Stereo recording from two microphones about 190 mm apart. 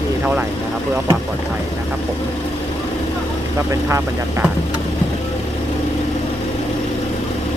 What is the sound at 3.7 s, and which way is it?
Speech, 15° right (ahead or behind).